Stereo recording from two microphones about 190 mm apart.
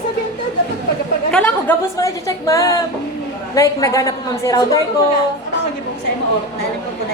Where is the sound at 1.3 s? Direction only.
15° left (ahead or behind).